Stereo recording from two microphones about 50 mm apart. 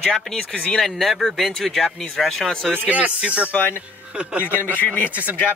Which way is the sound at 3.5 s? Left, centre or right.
Left.